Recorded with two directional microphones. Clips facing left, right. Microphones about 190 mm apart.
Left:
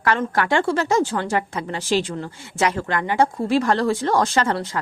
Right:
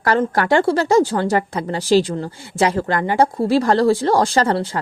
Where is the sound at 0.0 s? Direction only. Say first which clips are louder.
Right 3 dB; 35° right (ahead or behind).